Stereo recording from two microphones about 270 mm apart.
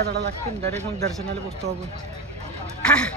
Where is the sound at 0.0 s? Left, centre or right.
Right.